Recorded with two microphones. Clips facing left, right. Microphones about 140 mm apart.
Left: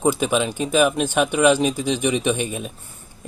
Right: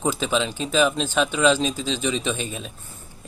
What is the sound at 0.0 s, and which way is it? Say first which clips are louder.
Speech: left 4 dB; 15° left (ahead or behind).